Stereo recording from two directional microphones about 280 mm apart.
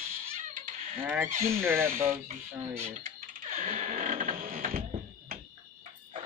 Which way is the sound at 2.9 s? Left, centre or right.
Right.